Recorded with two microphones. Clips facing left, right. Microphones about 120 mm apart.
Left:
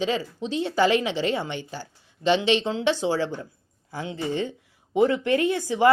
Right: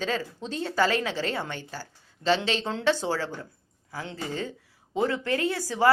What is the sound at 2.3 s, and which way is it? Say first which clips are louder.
Speech: left 5 dB; 40° right (ahead or behind).